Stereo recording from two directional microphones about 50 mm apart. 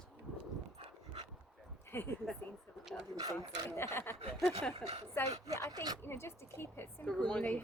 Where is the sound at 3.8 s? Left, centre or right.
Left.